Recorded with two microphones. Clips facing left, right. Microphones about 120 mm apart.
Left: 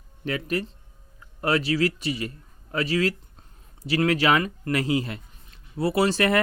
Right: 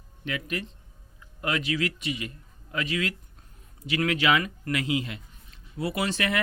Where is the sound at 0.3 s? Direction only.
40° left (ahead or behind).